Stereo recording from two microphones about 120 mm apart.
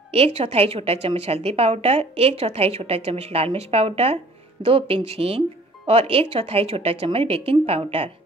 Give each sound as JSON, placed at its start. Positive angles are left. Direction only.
{"t": 0.1, "sound": "a woman's voice", "side_deg": -55}